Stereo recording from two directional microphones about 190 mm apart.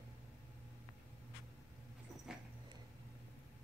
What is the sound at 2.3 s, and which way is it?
Dog, 5° right (ahead or behind).